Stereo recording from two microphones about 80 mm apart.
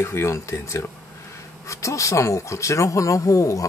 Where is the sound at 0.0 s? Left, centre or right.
Left.